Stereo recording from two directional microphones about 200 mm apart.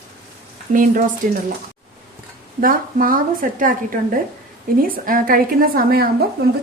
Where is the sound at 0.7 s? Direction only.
40° right (ahead or behind).